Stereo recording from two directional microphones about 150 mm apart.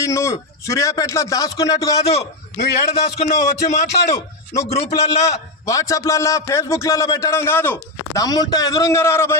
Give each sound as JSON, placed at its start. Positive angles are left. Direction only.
{"t": 0.0, "sound": "a man's voice", "side_deg": 20}
{"t": 2.0, "sound": "a man's voice", "side_deg": 45}
{"t": 4.1, "sound": "speech", "side_deg": 20}
{"t": 4.7, "sound": "a man's voice", "side_deg": 45}
{"t": 5.2, "sound": "a man's voice", "side_deg": 20}
{"t": 8.2, "sound": "a man's voice", "side_deg": 25}